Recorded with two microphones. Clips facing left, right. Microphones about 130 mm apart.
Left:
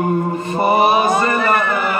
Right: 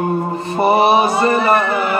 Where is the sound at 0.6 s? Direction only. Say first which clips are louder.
Right 2 dB; 35° right (ahead or behind).